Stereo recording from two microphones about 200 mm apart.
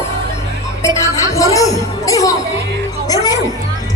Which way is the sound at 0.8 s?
15° left (ahead or behind).